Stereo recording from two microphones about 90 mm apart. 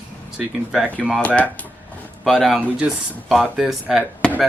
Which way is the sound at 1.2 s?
15° left (ahead or behind).